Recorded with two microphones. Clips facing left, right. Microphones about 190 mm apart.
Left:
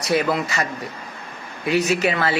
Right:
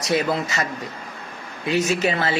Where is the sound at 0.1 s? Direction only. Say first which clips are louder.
Left 1 dB; 25° right (ahead or behind).